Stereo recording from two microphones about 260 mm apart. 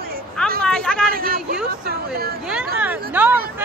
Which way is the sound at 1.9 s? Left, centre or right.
Right.